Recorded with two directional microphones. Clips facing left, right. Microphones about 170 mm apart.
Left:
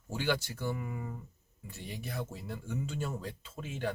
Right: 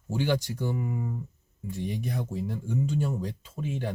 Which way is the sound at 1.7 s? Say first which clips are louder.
Right 10 dB; 15° right (ahead or behind).